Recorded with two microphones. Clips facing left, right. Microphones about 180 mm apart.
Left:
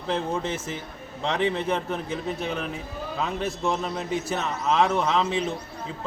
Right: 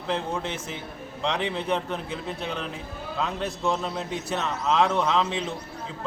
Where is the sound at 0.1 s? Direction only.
5° left (ahead or behind).